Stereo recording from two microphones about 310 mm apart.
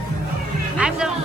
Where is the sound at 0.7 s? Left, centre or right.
Centre.